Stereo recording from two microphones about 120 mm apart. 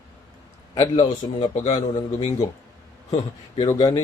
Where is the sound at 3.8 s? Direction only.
30° left (ahead or behind).